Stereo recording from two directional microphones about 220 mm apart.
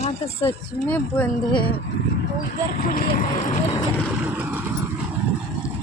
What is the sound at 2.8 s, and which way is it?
Speech, 35° left (ahead or behind).